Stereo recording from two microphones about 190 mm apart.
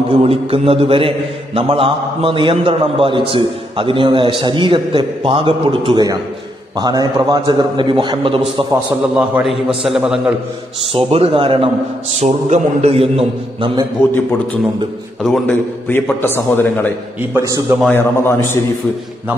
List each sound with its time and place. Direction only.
0.2 s a man's voice: 30° right (ahead or behind)
9.1 s a man's voice: 5° right (ahead or behind)
10.9 s a man's voice: 30° right (ahead or behind)
15.2 s a man's voice: 5° left (ahead or behind)
17.3 s a man's voice: 15° right (ahead or behind)
17.9 s a man's voice: 10° left (ahead or behind)